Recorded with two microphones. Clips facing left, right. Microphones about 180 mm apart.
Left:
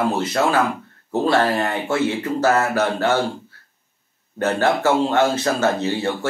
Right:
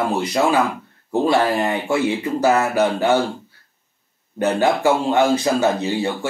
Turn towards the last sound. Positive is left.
turn(degrees=-15)  # may be behind; listen again after turning